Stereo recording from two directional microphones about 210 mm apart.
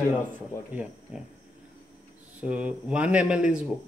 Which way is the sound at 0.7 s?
5° right (ahead or behind).